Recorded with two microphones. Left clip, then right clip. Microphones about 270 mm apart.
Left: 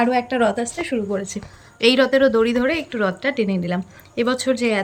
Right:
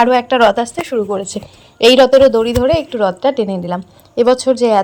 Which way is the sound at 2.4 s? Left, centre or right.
Centre.